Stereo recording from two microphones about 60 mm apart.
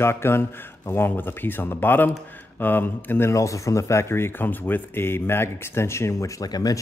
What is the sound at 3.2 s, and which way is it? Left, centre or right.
Speech, left.